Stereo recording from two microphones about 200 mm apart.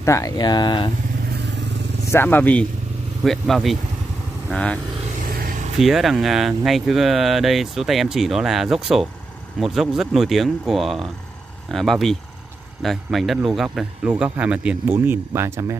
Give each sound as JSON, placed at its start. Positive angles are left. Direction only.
{"t": 0.0, "sound": "speech", "side_deg": 15}
{"t": 2.0, "sound": "speech", "side_deg": 10}
{"t": 5.3, "sound": "vehicle", "side_deg": -45}
{"t": 5.8, "sound": "speech", "side_deg": 0}